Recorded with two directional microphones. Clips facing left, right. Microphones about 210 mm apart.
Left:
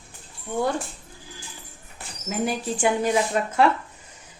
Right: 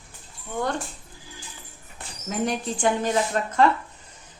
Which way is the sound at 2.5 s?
10° left (ahead or behind).